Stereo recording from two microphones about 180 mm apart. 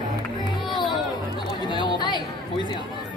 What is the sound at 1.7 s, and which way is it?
Chatter, 25° left (ahead or behind).